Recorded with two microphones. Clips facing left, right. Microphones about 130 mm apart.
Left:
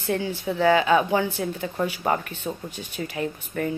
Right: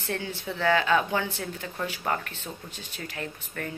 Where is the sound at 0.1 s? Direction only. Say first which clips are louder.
Left 7 dB; 15° left (ahead or behind).